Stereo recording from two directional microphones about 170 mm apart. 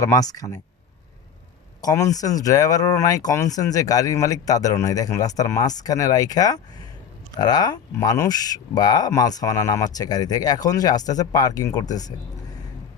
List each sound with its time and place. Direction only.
0.0 s speech: 20° left (ahead or behind)
1.8 s speech: 20° left (ahead or behind)